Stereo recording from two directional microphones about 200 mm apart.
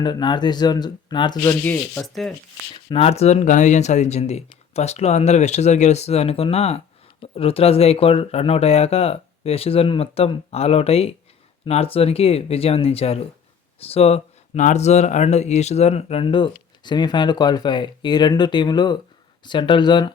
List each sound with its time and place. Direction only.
0.0 s speech: 20° left (ahead or behind)
1.6 s speech: 5° left (ahead or behind)
2.7 s speech: 30° left (ahead or behind)